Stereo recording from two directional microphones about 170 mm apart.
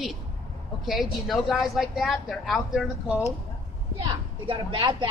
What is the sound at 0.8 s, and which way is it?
A woman's voice, centre (ahead or behind).